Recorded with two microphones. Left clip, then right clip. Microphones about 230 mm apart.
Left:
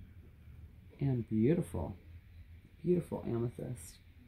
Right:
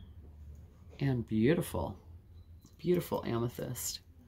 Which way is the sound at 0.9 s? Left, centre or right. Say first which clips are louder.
Right 2 dB; centre.